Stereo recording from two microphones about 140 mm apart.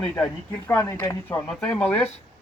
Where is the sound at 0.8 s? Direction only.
20° left (ahead or behind).